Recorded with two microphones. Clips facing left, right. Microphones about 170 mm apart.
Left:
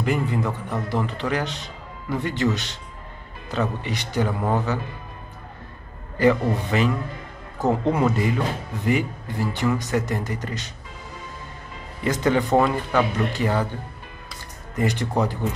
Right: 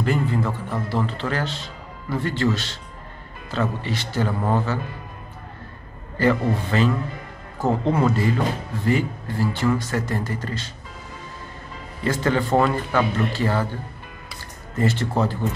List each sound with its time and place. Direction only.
0.0 s a man's voice: 15° left (ahead or behind)
6.1 s a man's voice: 15° left (ahead or behind)
12.0 s a man's voice: 15° left (ahead or behind)
14.8 s a man's voice: 15° left (ahead or behind)